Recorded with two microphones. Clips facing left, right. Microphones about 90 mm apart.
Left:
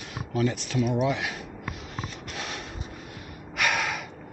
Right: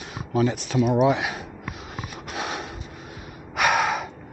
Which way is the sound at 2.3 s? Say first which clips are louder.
Right 8 dB; 20° right (ahead or behind).